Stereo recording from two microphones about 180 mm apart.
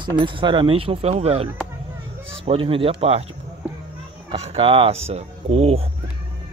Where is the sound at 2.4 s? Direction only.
30° right (ahead or behind).